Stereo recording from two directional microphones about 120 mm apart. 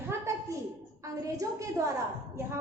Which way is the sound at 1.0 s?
25° right (ahead or behind).